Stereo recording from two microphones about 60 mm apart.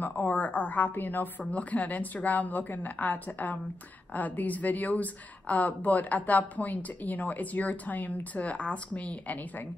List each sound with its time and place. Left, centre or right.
0.0 s a woman's voice: left